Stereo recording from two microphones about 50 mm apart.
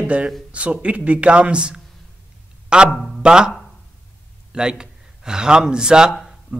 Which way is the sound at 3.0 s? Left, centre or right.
Centre.